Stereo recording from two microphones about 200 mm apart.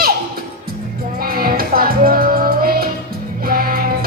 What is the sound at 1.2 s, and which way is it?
Music, 50° right (ahead or behind).